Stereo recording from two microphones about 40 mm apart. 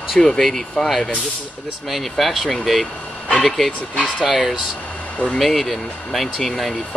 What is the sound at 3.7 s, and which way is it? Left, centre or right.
Speech, left.